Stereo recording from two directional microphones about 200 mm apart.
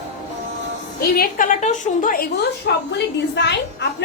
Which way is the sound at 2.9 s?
60° left (ahead or behind).